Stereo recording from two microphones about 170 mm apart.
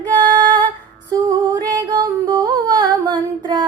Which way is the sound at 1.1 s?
25° right (ahead or behind).